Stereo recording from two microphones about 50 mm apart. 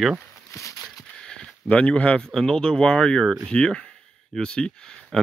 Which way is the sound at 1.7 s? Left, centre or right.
Left.